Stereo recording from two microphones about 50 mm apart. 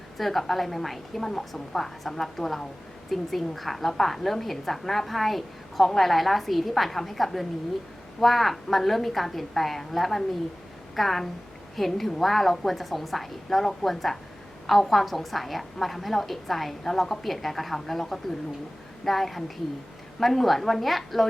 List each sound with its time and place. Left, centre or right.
0.2 s a woman's voice: centre